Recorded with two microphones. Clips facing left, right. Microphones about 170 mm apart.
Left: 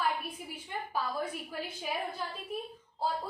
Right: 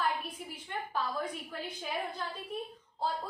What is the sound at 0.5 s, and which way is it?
A woman's voice, 5° left (ahead or behind).